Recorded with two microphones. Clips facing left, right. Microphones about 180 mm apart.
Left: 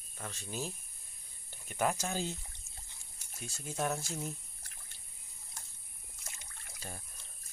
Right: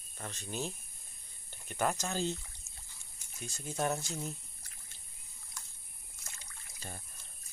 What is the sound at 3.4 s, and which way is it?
Speech, centre (ahead or behind).